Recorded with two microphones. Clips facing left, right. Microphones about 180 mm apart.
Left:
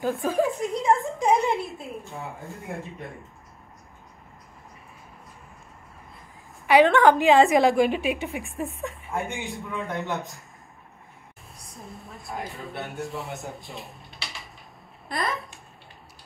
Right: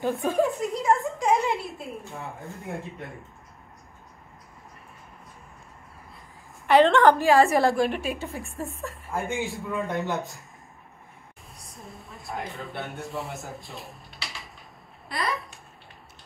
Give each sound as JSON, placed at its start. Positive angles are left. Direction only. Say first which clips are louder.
{"t": 0.0, "sound": "chuckle", "louder": "even", "side_deg": 0}
{"t": 1.3, "sound": "a sound", "louder": "left 2 dB", "side_deg": 0}
{"t": 2.1, "sound": "speech", "louder": "left 1 dB", "side_deg": 0}
{"t": 6.6, "sound": "a woman's voice", "louder": "even", "side_deg": 10}
{"t": 8.4, "sound": "speech", "louder": "left 3 dB", "side_deg": 0}
{"t": 11.5, "sound": "a woman's voice", "louder": "left 2 dB", "side_deg": 0}
{"t": 15.1, "sound": "speech", "louder": "left 2 dB", "side_deg": 50}